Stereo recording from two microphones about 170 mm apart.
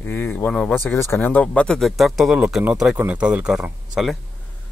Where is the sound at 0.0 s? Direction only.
10° left (ahead or behind).